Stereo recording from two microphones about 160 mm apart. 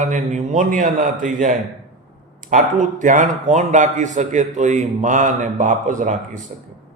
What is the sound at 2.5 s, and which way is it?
A man's voice, 50° right (ahead or behind).